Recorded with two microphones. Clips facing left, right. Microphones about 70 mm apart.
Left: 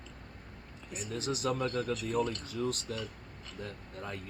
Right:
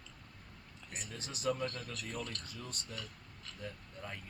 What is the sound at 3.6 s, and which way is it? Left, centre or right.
Speech, left.